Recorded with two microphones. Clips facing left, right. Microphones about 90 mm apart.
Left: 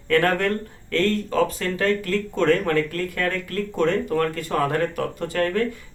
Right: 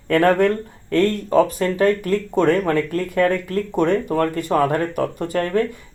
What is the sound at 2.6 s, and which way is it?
Speech, 30° right (ahead or behind).